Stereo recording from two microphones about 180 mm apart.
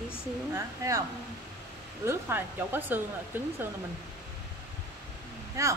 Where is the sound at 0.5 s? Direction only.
20° right (ahead or behind).